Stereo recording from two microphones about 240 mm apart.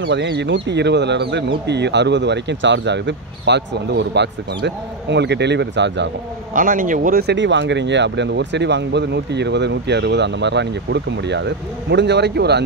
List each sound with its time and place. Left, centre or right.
0.0 s speech: right
6.5 s speech: right